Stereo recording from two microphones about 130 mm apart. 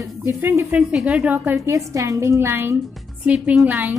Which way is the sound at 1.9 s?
25° right (ahead or behind).